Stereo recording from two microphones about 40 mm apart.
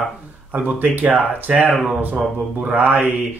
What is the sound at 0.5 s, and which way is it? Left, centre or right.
Speech, right.